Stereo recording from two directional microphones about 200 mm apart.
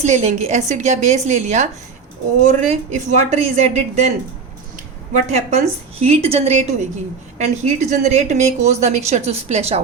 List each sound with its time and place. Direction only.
0.0 s a woman's voice: 35° right (ahead or behind)
5.3 s a woman's voice: 35° right (ahead or behind)